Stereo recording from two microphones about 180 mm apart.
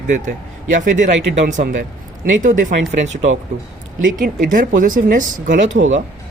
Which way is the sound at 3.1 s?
90° right.